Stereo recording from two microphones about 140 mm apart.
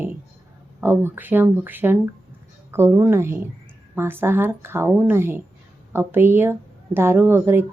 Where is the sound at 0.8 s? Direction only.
15° right (ahead or behind).